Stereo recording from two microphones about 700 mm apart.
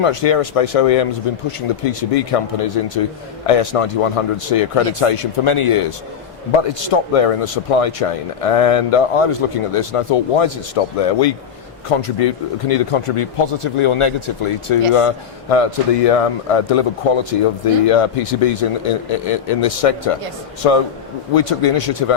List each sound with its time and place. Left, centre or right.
0.0 s speech: left
11.9 s speech: left